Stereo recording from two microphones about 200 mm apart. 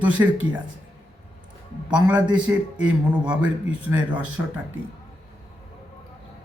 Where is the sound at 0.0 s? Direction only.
5° right (ahead or behind).